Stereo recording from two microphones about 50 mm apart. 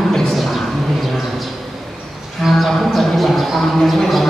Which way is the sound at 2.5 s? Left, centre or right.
Centre.